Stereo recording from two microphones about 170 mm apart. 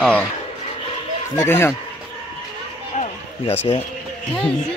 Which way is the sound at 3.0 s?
35° left (ahead or behind).